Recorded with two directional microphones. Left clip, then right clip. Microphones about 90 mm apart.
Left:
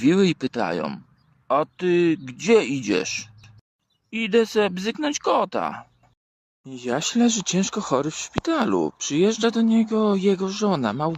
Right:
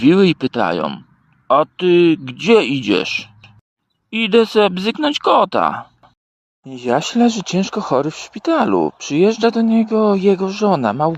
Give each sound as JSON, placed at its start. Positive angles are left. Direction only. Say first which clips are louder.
{"t": 0.0, "sound": "speech", "louder": "right 7 dB", "side_deg": -35}
{"t": 4.1, "sound": "speech", "louder": "right 7 dB", "side_deg": -50}
{"t": 6.6, "sound": "speech", "louder": "right 8 dB", "side_deg": -30}